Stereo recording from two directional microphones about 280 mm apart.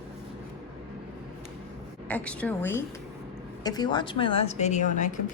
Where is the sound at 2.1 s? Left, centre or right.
Centre; by 5.1 s left.